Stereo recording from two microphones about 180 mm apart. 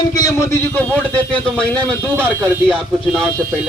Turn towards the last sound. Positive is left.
turn(degrees=0)  # may be behind; listen again after turning